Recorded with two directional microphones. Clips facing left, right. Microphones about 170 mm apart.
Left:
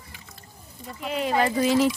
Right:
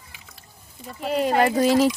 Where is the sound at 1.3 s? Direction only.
55° right (ahead or behind).